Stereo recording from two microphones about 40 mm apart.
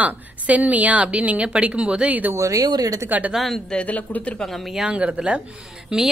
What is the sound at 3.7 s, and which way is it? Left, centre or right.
Speech, left.